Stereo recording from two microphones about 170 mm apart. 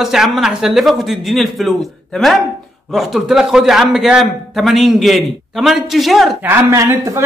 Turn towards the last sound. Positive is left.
turn(degrees=-15)  # may be behind; listen again after turning